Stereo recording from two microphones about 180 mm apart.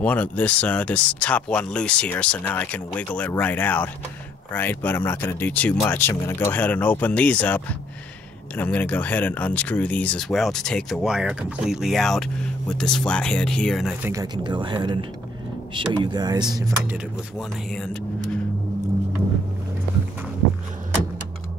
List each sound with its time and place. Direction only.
0.0 s speech: 10° left (ahead or behind)
14.0 s speech: 20° right (ahead or behind)
16.9 s speech: centre (ahead or behind)